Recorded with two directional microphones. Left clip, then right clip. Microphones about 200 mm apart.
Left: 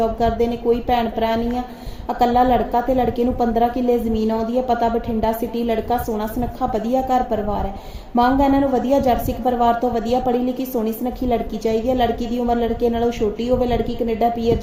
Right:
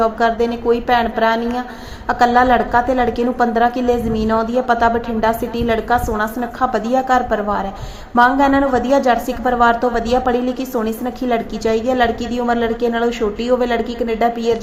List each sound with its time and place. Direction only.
0.0 s a woman's voice: centre (ahead or behind)